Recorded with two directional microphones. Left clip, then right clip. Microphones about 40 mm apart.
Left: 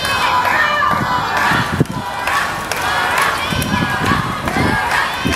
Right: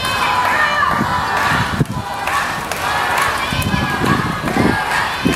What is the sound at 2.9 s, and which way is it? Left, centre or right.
Run, left.